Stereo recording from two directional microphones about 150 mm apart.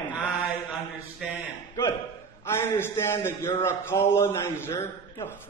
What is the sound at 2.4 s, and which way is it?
A man's voice, 15° left (ahead or behind).